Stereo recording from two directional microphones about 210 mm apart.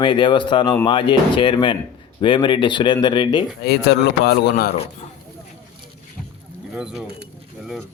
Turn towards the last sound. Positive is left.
turn(degrees=0)  # may be behind; listen again after turning